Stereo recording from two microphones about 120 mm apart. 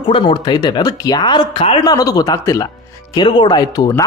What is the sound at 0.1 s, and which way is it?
Speech, 45° left (ahead or behind).